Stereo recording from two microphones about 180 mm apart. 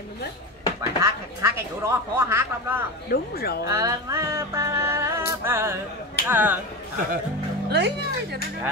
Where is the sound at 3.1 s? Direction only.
60° left (ahead or behind).